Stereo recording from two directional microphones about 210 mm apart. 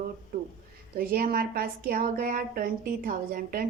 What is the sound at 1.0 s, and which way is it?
A woman's voice, 45° right (ahead or behind).